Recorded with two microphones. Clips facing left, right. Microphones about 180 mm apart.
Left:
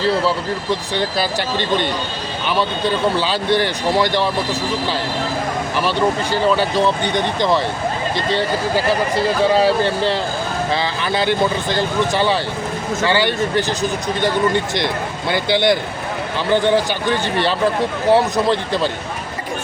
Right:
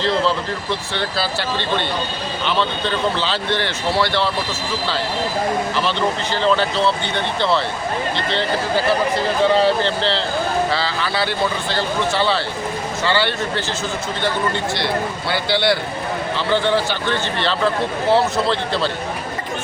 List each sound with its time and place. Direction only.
0.0 s speech: 10° left (ahead or behind)
5.8 s speech: 10° left (ahead or behind)